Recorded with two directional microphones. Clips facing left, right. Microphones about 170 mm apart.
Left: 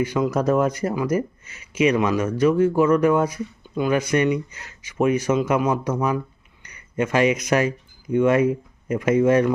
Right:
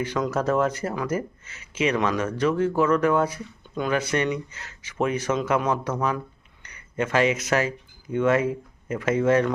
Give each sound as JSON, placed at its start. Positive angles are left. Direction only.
{"t": 0.0, "sound": "speech", "side_deg": 10}